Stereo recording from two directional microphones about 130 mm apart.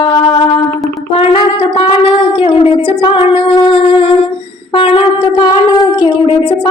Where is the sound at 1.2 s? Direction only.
45° left (ahead or behind).